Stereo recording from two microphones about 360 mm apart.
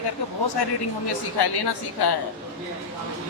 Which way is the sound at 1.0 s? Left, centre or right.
Left.